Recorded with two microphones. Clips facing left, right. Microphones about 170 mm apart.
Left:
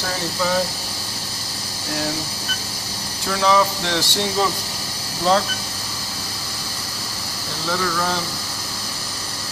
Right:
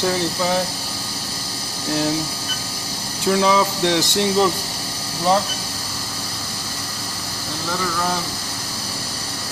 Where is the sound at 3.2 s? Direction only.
20° right (ahead or behind).